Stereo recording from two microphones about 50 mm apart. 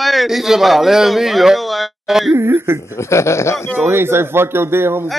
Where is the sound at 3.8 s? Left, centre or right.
Right.